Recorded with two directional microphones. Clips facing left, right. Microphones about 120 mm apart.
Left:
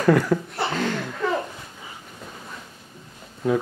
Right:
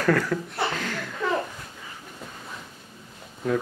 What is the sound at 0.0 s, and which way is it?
Speech, 20° left (ahead or behind).